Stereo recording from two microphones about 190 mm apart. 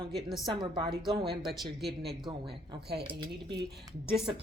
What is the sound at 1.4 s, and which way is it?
Speech, centre (ahead or behind).